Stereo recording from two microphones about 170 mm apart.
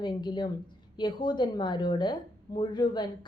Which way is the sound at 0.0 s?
25° left (ahead or behind).